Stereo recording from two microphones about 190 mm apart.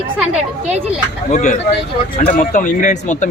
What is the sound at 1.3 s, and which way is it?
Speech, 40° left (ahead or behind).